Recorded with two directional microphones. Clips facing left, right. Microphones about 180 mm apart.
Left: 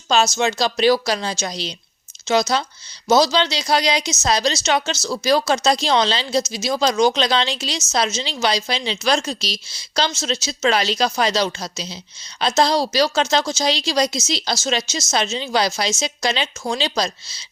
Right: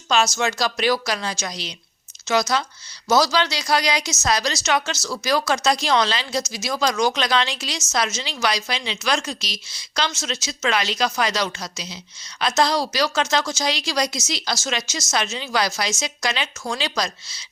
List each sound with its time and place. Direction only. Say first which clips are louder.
0.1 s a woman's voice: left 3 dB; 25° left (ahead or behind)